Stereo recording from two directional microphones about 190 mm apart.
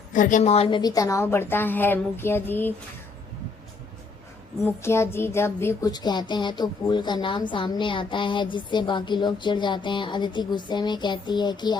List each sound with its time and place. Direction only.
0.1 s a woman's voice: 45° left (ahead or behind); by 2.7 s 10° left (ahead or behind)
4.6 s speech: 15° left (ahead or behind)